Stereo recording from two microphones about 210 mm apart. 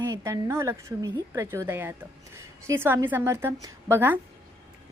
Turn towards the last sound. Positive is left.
turn(degrees=-10)  # may be behind; listen again after turning